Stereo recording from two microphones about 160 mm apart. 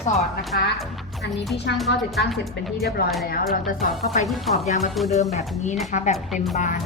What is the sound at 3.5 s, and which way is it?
A woman's voice, 60° left (ahead or behind).